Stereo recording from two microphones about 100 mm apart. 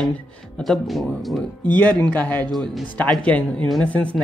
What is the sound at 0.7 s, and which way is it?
Speech, centre (ahead or behind).